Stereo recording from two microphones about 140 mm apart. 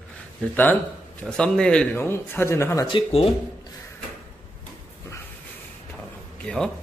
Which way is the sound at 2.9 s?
45° left (ahead or behind).